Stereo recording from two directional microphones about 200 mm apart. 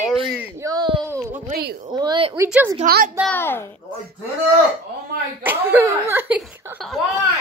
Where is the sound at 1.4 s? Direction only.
50° right (ahead or behind).